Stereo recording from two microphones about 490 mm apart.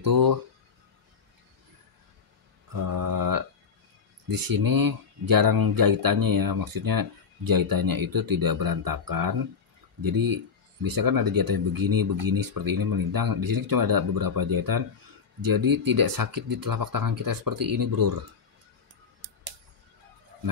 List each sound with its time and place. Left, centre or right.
0.0 s speech: right
2.7 s mantra: right
4.3 s speech: right